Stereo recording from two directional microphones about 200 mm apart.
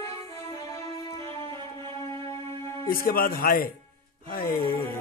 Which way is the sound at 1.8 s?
25° right (ahead or behind).